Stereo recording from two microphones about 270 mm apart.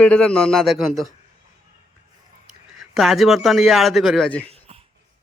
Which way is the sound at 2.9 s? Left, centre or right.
Centre.